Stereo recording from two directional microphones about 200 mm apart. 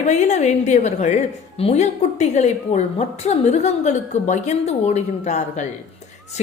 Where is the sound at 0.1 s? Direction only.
35° left (ahead or behind).